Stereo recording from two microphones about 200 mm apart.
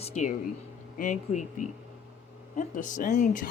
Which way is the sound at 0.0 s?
35° left (ahead or behind).